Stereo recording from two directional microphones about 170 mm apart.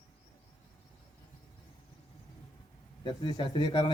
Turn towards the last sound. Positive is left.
turn(degrees=25)  # may be behind; listen again after turning